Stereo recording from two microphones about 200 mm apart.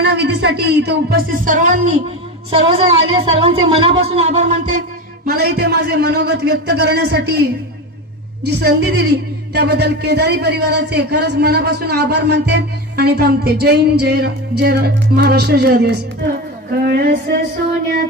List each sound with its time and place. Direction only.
0.0 s a woman's voice: 55° right (ahead or behind)
8.5 s a woman's voice: 55° right (ahead or behind)